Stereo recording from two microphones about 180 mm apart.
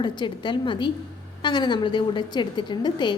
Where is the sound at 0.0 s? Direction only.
25° left (ahead or behind).